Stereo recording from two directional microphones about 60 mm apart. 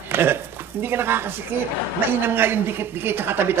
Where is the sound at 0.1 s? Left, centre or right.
Right.